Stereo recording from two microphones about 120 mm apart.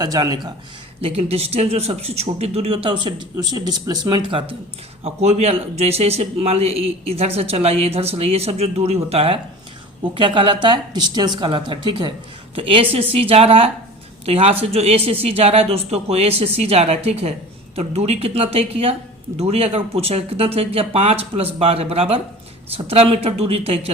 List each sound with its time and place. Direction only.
0.0 s speech: 35° right (ahead or behind)
1.0 s a man's voice: 60° right (ahead or behind)
5.0 s a man's voice: 60° right (ahead or behind)